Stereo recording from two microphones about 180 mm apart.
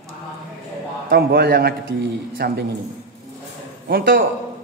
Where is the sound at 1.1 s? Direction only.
60° right (ahead or behind).